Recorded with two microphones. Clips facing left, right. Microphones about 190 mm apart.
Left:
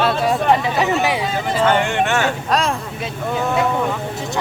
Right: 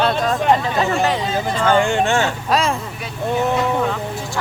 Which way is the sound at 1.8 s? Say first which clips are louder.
Right 1 dB; 30° right (ahead or behind).